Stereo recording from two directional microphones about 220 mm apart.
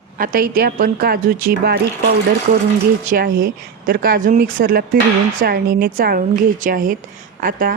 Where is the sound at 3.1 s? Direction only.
40° right (ahead or behind).